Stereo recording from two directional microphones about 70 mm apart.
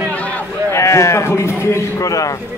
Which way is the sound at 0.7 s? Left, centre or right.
Left.